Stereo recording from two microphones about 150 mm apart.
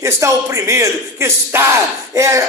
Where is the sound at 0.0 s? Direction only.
20° right (ahead or behind).